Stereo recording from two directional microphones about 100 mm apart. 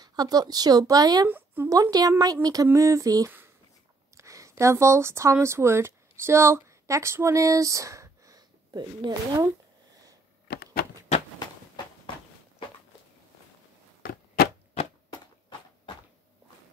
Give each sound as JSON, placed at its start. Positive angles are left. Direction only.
{"t": 0.0, "sound": "speech", "side_deg": -40}
{"t": 1.2, "sound": "speech", "side_deg": -20}
{"t": 1.7, "sound": "speech", "side_deg": -40}